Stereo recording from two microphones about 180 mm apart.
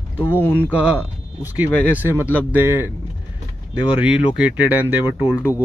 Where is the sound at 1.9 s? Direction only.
10° right (ahead or behind).